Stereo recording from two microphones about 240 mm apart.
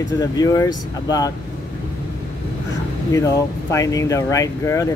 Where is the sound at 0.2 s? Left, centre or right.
Centre.